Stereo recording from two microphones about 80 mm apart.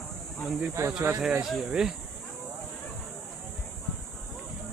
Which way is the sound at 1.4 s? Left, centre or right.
Centre.